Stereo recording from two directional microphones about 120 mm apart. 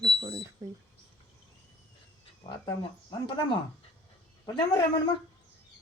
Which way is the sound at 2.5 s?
40° left (ahead or behind).